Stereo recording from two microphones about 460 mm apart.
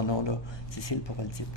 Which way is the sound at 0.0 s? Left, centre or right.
Left.